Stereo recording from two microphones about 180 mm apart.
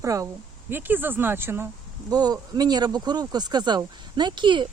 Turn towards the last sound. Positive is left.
turn(degrees=-25)  # may be behind; listen again after turning